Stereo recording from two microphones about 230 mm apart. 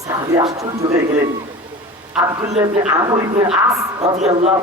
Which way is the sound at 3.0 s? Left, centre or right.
Centre.